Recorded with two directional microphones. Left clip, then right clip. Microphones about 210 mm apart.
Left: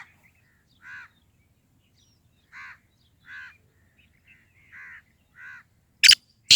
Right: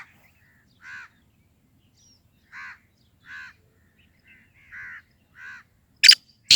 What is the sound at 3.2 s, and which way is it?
Crow, 35° right (ahead or behind).